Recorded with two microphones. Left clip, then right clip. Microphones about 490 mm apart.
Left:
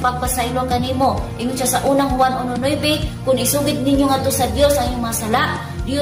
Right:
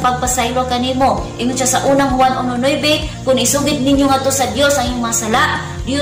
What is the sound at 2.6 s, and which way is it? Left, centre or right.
A woman's voice, left.